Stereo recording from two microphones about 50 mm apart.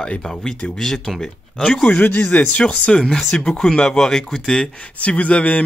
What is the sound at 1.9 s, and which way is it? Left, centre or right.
A man's voice, left.